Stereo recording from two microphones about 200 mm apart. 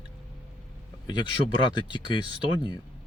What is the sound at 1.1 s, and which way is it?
Speech, 20° left (ahead or behind).